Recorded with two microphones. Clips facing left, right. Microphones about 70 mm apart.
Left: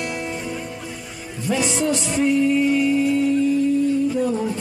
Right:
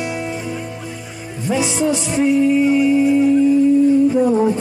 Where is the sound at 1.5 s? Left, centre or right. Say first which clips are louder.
Right 3 dB; centre.